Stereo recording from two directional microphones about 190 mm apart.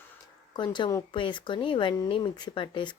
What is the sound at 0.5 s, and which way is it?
Speech, 25° left (ahead or behind).